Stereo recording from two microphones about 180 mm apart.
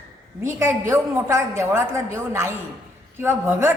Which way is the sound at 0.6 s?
15° right (ahead or behind).